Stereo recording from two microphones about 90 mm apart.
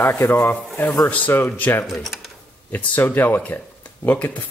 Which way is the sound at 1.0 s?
15° left (ahead or behind).